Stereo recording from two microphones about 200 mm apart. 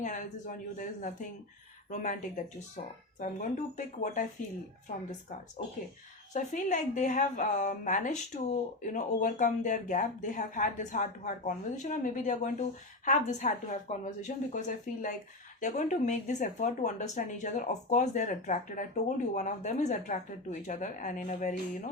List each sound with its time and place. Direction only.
0.0 s speech: 40° left (ahead or behind)
15.6 s speech: 40° left (ahead or behind)